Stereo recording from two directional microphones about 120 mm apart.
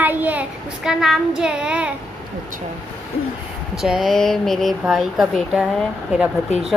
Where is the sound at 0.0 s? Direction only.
15° right (ahead or behind).